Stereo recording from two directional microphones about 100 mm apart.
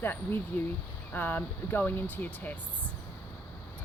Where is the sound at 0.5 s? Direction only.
20° left (ahead or behind).